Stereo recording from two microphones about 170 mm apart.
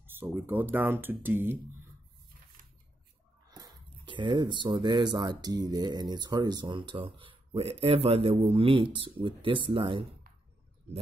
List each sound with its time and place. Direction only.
0.0 s speech: 10° right (ahead or behind)
3.4 s speech: 20° right (ahead or behind)